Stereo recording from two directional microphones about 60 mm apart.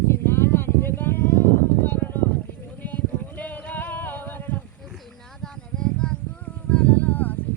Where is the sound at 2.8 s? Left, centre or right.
Left.